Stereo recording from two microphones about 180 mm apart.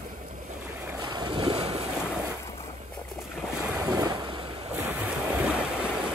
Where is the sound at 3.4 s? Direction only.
5° right (ahead or behind).